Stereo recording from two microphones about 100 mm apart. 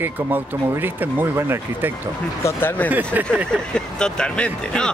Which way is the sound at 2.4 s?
20° left (ahead or behind).